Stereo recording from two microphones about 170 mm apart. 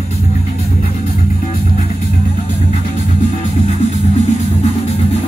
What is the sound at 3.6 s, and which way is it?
Music, 40° left (ahead or behind).